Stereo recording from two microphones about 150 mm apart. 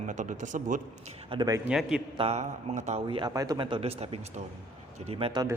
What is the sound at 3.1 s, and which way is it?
Speech, 30° right (ahead or behind).